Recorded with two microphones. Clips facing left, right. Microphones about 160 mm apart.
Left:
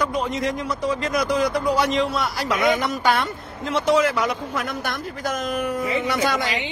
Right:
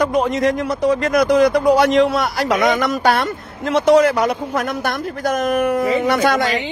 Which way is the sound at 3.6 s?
70° right (ahead or behind).